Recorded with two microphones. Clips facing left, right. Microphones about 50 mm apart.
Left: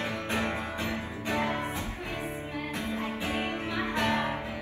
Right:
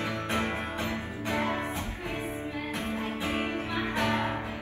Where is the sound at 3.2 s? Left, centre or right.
Right.